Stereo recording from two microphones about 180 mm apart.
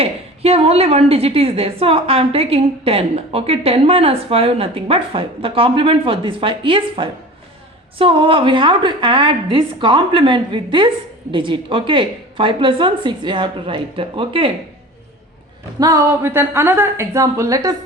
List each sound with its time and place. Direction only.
0.0 s a woman's voice: 35° right (ahead or behind)
15.8 s a woman's voice: 20° right (ahead or behind)